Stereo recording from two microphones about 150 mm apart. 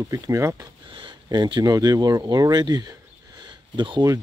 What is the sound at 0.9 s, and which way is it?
Speech, 30° right (ahead or behind).